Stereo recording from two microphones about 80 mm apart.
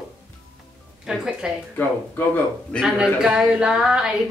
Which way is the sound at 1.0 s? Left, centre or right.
Centre.